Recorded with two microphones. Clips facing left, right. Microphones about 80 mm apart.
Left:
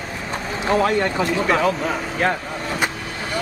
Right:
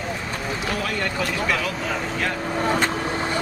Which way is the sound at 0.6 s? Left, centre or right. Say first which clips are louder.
Left 10 dB; left.